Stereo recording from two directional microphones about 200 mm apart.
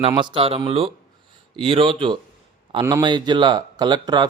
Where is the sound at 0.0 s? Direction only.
25° right (ahead or behind).